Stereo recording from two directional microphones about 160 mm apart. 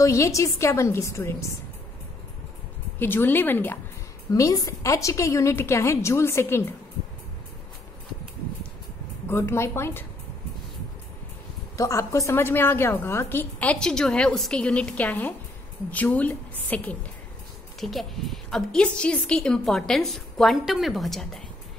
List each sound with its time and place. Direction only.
0.0 s a woman's voice: 20° left (ahead or behind)
3.0 s a woman's voice: 15° left (ahead or behind)
9.3 s a woman's voice: 15° left (ahead or behind)
11.7 s a woman's voice: 20° left (ahead or behind); by 21.4 s centre (ahead or behind)